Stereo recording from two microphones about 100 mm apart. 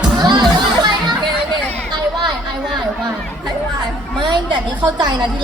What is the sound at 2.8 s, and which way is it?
Chatter, 45° right (ahead or behind).